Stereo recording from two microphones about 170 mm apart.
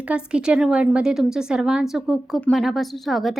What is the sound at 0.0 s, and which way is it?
A woman's voice, 5° right (ahead or behind).